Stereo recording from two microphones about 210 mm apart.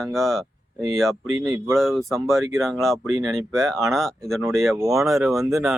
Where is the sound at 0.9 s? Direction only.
Centre (ahead or behind).